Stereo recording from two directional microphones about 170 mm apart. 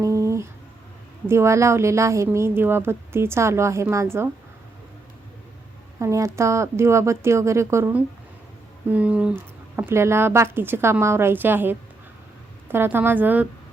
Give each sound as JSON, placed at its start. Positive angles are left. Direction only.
{"t": 0.0, "sound": "a sound", "side_deg": -20}
{"t": 1.3, "sound": "a woman's voice", "side_deg": -15}
{"t": 6.0, "sound": "a woman's voice", "side_deg": -20}